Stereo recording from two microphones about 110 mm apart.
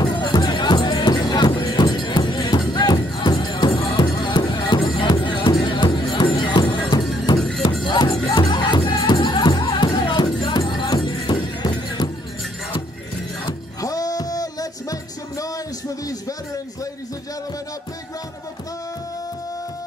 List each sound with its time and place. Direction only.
0.0 s music: 40° left (ahead or behind)
7.3 s music: 5° left (ahead or behind)
7.8 s music: 40° left (ahead or behind)
13.5 s music: 35° left (ahead or behind)